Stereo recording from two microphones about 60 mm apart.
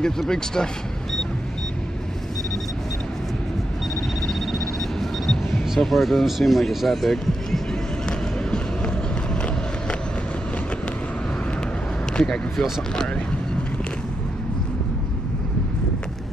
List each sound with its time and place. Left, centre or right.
0.0 s speech: centre
4.3 s a sound: centre
8.5 s vehicle: centre
12.1 s speech: centre